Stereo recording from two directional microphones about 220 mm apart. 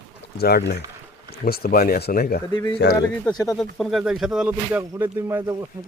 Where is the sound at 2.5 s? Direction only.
20° left (ahead or behind).